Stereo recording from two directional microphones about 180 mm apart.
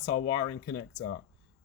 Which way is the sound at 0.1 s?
35° left (ahead or behind).